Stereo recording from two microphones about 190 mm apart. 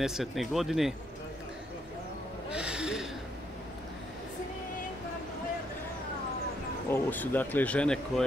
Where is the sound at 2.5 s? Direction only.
5° right (ahead or behind).